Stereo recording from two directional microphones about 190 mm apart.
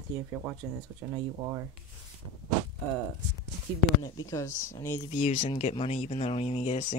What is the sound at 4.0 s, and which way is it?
Speech, 20° left (ahead or behind).